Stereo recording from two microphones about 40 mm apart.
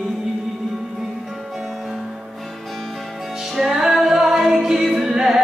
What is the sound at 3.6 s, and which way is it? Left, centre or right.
Music, centre.